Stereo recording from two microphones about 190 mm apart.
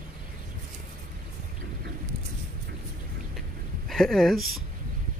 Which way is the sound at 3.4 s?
Centre (ahead or behind).